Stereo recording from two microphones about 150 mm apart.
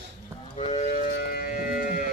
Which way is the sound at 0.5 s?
45° left (ahead or behind).